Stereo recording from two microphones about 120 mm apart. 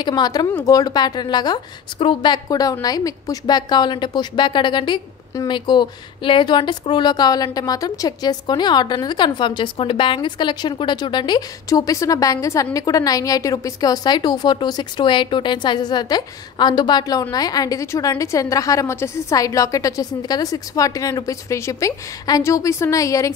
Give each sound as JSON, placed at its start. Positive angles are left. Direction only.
{"t": 0.0, "sound": "a woman's voice", "side_deg": 35}